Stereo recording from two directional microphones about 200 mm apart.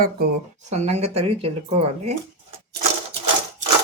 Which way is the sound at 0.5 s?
35° right (ahead or behind).